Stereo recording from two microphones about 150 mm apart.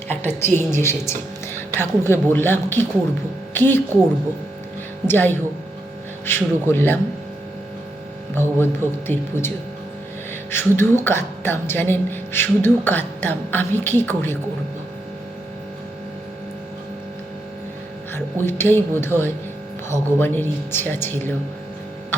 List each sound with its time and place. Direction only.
0.3 s a woman's voice: 15° left (ahead or behind)
5.0 s speech: 15° left (ahead or behind)
8.4 s speech: 15° left (ahead or behind)
10.5 s speech: 15° left (ahead or behind)
18.1 s speech: 15° left (ahead or behind)